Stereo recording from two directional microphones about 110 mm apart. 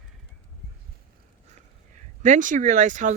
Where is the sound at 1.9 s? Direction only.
90° right.